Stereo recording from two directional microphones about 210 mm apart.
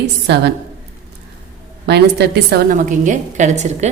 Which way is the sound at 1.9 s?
50° right (ahead or behind).